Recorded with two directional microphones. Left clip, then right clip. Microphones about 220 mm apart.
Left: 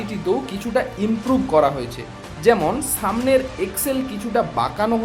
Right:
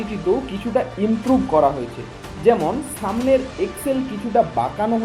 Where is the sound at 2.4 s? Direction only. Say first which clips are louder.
Even; 15° left (ahead or behind).